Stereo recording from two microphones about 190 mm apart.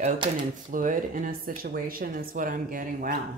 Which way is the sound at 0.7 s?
45° right (ahead or behind).